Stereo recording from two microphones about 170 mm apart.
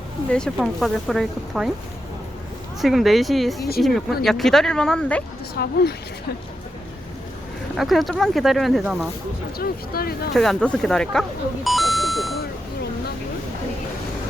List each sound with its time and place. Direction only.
0.3 s speech: 5° left (ahead or behind)
2.8 s speech: centre (ahead or behind)
5.6 s a woman's voice: 70° left (ahead or behind)
7.8 s speech: centre (ahead or behind)
9.6 s speech: 65° left (ahead or behind)
10.3 s speech: centre (ahead or behind)